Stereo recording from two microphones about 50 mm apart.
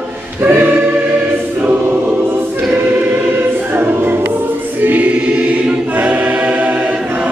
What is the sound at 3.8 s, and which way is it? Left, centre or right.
Music, right.